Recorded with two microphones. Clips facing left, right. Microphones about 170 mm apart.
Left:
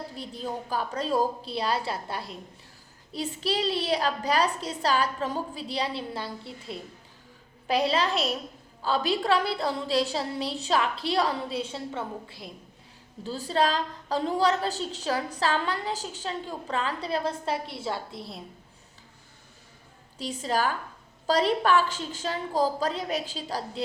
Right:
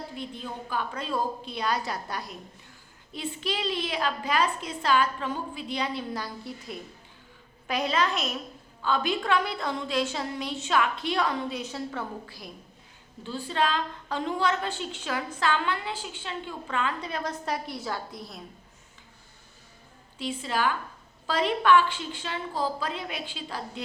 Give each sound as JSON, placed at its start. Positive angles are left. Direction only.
{"t": 0.2, "sound": "a woman's voice", "side_deg": 35}
{"t": 13.2, "sound": "a woman's voice", "side_deg": 40}
{"t": 20.1, "sound": "a woman's voice", "side_deg": 40}